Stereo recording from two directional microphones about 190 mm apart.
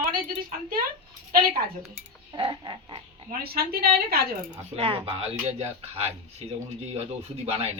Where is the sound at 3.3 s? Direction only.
55° right (ahead or behind).